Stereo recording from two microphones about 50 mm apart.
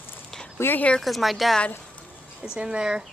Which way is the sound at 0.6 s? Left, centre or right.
Left.